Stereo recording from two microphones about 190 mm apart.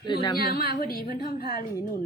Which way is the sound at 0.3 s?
55° left (ahead or behind).